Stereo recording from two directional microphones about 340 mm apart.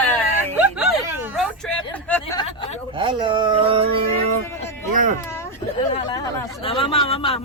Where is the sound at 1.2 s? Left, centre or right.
Centre.